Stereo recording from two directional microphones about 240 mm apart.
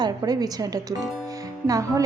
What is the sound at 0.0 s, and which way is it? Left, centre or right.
A woman's voice, centre.